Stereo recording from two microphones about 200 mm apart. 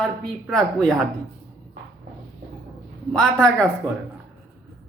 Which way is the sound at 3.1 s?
5° left (ahead or behind).